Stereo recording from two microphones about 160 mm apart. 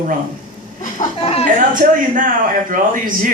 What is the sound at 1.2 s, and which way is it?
Speech, 40° left (ahead or behind).